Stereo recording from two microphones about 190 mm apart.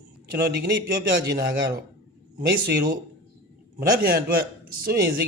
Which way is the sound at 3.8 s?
50° right (ahead or behind).